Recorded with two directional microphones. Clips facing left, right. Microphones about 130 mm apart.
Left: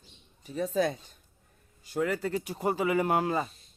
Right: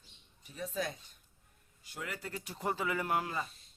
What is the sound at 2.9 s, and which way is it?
Speech, 85° left.